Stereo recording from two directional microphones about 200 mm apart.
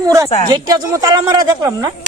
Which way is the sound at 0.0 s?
15° right (ahead or behind).